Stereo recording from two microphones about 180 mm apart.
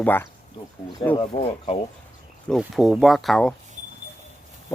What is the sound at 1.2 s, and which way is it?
Speech, 35° left (ahead or behind).